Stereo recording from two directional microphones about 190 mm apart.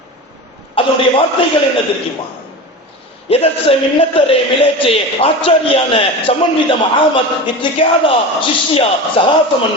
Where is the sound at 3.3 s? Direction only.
30° left (ahead or behind).